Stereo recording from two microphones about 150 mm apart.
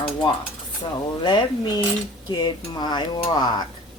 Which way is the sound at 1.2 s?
30° left (ahead or behind).